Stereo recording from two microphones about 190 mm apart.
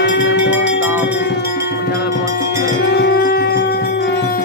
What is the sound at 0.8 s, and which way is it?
Music, 10° right (ahead or behind).